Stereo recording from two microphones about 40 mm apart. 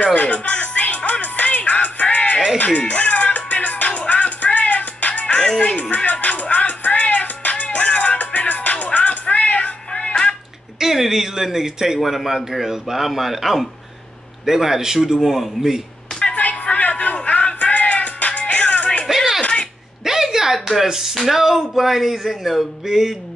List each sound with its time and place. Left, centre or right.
0.0 s music: left
5.2 s music: left
10.8 s a man's voice: centre
16.2 s music: left
19.1 s music: centre
19.4 s a sound: left
20.1 s speech: centre